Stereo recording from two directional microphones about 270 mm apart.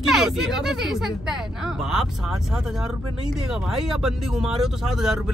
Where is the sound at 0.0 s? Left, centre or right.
Centre.